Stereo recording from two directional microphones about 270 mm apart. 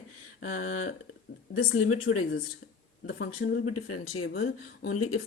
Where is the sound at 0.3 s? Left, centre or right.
Left.